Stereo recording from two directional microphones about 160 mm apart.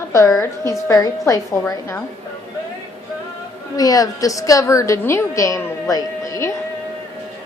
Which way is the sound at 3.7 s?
20° left (ahead or behind).